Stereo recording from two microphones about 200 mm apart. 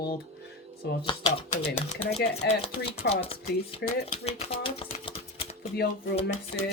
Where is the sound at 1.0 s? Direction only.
25° left (ahead or behind).